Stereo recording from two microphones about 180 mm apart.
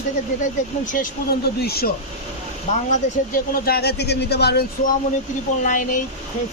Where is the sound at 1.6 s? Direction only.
60° left (ahead or behind).